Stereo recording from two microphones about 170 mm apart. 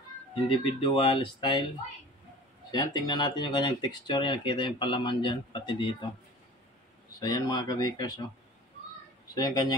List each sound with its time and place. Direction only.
0.3 s speech: 30° left (ahead or behind)
2.7 s speech: 25° left (ahead or behind)
7.2 s speech: 25° left (ahead or behind)
9.3 s speech: 25° left (ahead or behind)